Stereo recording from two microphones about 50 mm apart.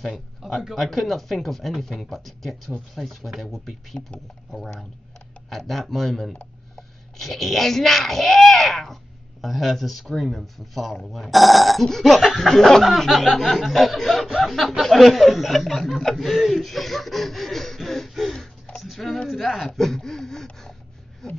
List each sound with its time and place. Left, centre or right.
0.4 s speech: centre
0.7 s speech: centre
18.8 s a sound: centre
19.2 s speech: centre